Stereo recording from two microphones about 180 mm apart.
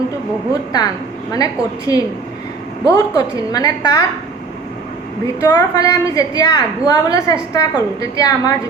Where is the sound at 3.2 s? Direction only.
20° left (ahead or behind).